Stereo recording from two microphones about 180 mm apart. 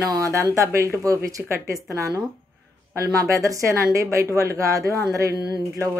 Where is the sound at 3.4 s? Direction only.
15° right (ahead or behind).